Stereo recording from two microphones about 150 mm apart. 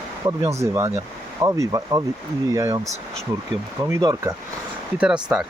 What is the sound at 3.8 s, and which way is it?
Speech, 25° right (ahead or behind).